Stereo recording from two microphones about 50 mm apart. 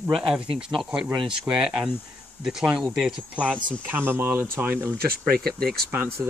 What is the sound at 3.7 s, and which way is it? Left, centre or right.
Speech, right.